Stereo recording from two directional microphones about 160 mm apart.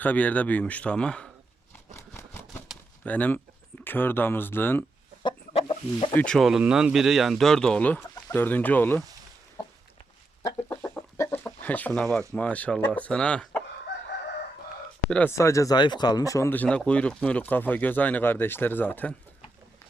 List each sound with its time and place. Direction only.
0.0 s speech: 10° left (ahead or behind)
2.0 s a sound: 15° left (ahead or behind)
3.0 s speech: 10° left (ahead or behind)
5.2 s chicken: 35° left (ahead or behind)
6.1 s speech: 5° left (ahead or behind)
10.4 s chicken: 15° left (ahead or behind)
12.3 s speech: 10° left (ahead or behind)
15.1 s speech: 15° left (ahead or behind)